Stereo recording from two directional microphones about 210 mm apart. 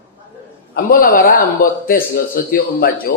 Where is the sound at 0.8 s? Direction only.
45° left (ahead or behind).